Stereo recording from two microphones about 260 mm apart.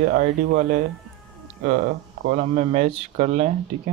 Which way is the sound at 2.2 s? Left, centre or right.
Right.